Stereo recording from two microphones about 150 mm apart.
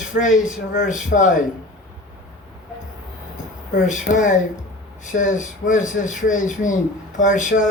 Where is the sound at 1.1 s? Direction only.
60° left (ahead or behind).